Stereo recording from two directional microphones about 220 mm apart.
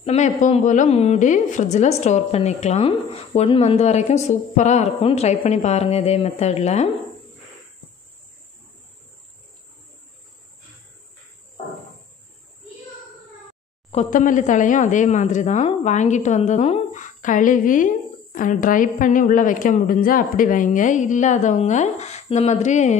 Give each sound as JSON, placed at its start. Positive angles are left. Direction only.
{"t": 0.0, "sound": "a woman's voice", "side_deg": 30}
{"t": 13.8, "sound": "speech", "side_deg": 30}